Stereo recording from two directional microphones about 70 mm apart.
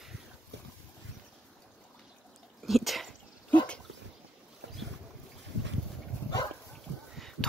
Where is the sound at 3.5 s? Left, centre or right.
Centre.